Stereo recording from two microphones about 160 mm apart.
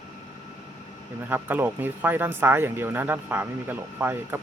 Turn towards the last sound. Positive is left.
turn(degrees=-15)  # may be behind; listen again after turning